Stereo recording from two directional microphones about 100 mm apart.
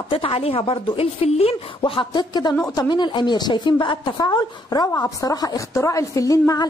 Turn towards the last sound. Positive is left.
turn(degrees=35)  # may be behind; listen again after turning